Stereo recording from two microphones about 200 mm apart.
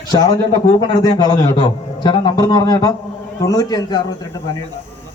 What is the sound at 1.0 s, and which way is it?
Speech, 20° left (ahead or behind).